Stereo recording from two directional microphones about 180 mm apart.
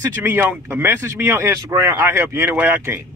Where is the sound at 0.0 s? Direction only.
15° right (ahead or behind).